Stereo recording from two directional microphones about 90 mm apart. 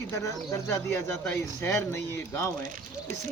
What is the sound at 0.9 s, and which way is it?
Speech, 25° left (ahead or behind).